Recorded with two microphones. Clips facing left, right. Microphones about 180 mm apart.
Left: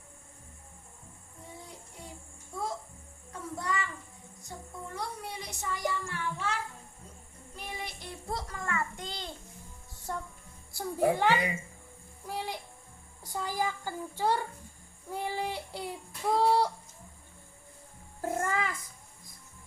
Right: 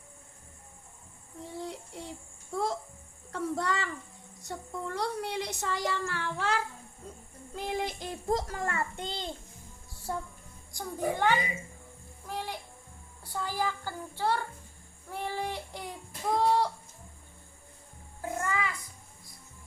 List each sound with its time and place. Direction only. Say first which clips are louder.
1.5 s child singing: right 11 dB; 80° right
2.5 s babbling: right 5 dB; 85° right
3.3 s child singing: right 4 dB; 75° right (ahead or behind)
7.6 s child singing: right 8 dB; 90° right
8.3 s a child's voice: right 5 dB; 40° right (ahead or behind); by 9.3 s 25° right (ahead or behind)
10.1 s speech: right 2 dB; 5° right (ahead or behind)
10.8 s a child's voice: left 4 dB; 10° left (ahead or behind)
12.3 s music: even; 10° left (ahead or behind)
13.3 s a child's voice: even; 15° left (ahead or behind)
15.1 s child singing: left 1 dB; 10° left (ahead or behind)
16.4 s fowl: left 1 dB; 10° left (ahead or behind)
18.2 s cat: left 1 dB; 45° left (ahead or behind)